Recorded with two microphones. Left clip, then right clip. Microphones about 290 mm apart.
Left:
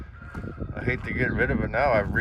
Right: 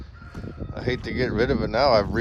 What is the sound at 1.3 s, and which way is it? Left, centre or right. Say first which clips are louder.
Speech: right 3 dB; right.